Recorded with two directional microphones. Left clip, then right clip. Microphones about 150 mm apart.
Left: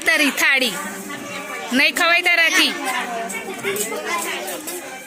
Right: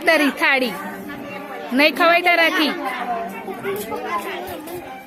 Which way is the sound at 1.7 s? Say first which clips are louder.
Right 1 dB; centre (ahead or behind).